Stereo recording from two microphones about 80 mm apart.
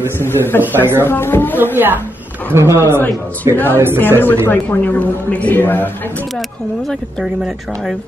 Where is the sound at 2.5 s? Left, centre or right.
Right.